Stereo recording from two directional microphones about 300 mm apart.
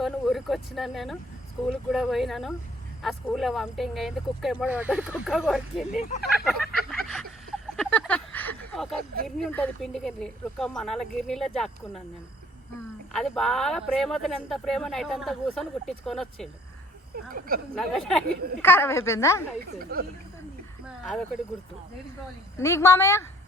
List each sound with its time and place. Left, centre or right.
0.0 s speech: centre
5.9 s speech: left
6.4 s a sound: centre
9.2 s speech: centre
13.1 s speech: centre
17.7 s a woman's voice: centre
19.8 s speech: right
20.8 s a sound: centre
22.5 s a woman's voice: centre